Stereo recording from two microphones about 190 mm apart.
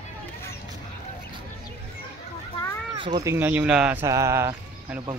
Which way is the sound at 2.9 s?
25° right (ahead or behind).